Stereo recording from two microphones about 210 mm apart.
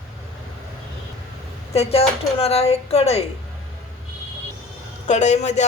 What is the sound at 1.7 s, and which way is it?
A woman's voice, 30° left (ahead or behind).